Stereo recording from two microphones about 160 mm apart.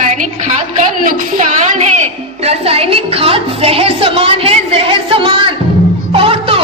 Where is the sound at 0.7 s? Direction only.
50° right (ahead or behind).